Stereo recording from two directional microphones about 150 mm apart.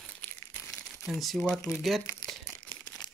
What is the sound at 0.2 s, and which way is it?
Crumpling, 10° left (ahead or behind).